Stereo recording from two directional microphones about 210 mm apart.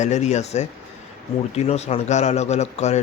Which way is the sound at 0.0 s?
35° left (ahead or behind).